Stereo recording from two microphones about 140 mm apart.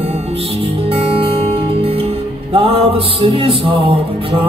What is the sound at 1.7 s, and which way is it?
Music, 45° right (ahead or behind).